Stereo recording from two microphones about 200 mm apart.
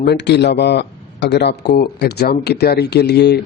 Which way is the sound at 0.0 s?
60° left (ahead or behind).